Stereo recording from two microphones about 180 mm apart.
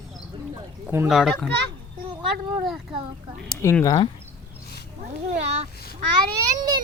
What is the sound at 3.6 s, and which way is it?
Speech, 15° left (ahead or behind).